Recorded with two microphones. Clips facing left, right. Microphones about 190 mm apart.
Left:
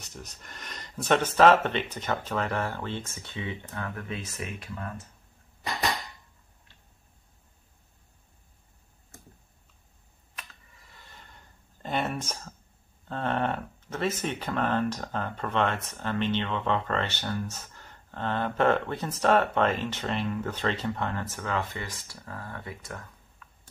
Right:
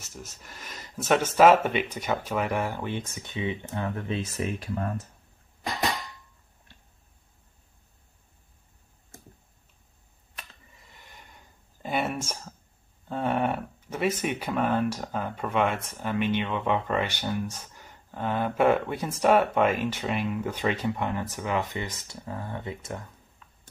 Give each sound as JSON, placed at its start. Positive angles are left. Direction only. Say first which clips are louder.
{"t": 0.0, "sound": "speech", "louder": "right 1 dB", "side_deg": -5}
{"t": 10.8, "sound": "a sound", "louder": "even", "side_deg": -20}
{"t": 13.1, "sound": "speech", "louder": "right 2 dB", "side_deg": -10}
{"t": 23.4, "sound": "horse", "louder": "left 4 dB", "side_deg": -25}